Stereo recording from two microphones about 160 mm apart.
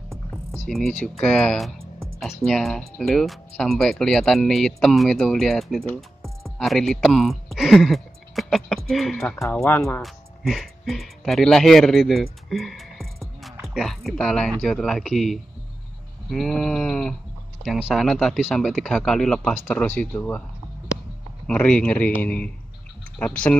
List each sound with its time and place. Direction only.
0.5 s speech: centre (ahead or behind)
9.4 s speech: 15° left (ahead or behind)
10.0 s speech: centre (ahead or behind)
21.5 s speech: 5° left (ahead or behind)